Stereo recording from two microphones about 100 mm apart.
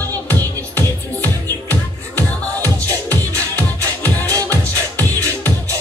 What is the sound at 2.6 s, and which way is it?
Music, 35° right (ahead or behind).